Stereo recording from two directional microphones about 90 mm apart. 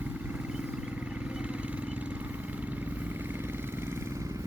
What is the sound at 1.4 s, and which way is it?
Vehicle, 10° right (ahead or behind).